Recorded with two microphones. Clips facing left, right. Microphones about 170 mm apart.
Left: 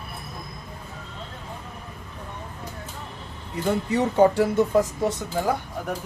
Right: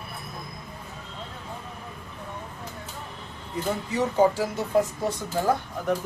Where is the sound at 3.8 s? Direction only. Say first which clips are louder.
Left 3 dB; 65° left (ahead or behind).